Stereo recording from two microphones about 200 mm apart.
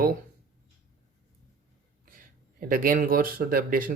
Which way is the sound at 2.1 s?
45° right (ahead or behind).